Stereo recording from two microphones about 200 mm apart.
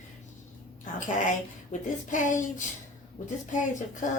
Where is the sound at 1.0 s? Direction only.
40° left (ahead or behind).